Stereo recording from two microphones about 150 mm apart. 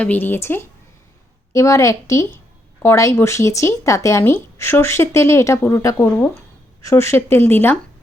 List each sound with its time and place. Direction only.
0.0 s speech: 10° left (ahead or behind)